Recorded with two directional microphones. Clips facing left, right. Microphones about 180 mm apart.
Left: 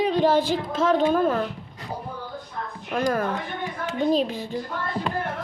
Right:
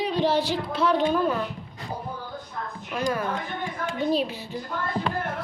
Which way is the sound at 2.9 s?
50° left (ahead or behind).